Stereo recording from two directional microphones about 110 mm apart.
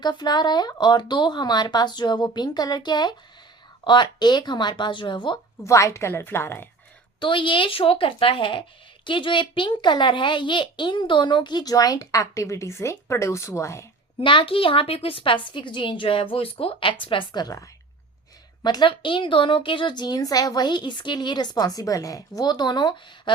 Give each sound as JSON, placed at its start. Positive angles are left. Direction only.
{"t": 0.0, "sound": "a woman's voice", "side_deg": 40}
{"t": 5.6, "sound": "a woman's voice", "side_deg": 25}
{"t": 7.2, "sound": "a child's voice", "side_deg": 50}
{"t": 14.2, "sound": "a child's voice", "side_deg": 50}
{"t": 17.4, "sound": "a woman's voice", "side_deg": 30}
{"t": 18.6, "sound": "a woman's voice", "side_deg": 40}